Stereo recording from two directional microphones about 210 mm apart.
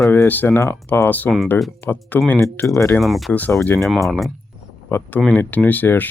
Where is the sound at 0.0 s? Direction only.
10° left (ahead or behind).